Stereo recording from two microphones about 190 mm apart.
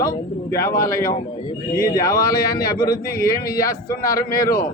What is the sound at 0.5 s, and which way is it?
A man's voice, 15° left (ahead or behind).